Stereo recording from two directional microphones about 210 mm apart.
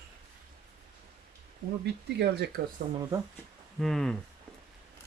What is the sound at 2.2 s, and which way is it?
Speech, 50° right (ahead or behind).